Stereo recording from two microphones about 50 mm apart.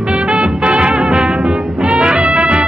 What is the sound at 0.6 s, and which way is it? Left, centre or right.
Music, right.